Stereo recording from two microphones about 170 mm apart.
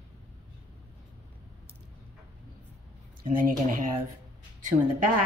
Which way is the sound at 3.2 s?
50° right (ahead or behind).